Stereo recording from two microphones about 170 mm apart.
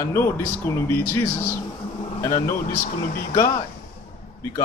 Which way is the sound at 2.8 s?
50° left (ahead or behind).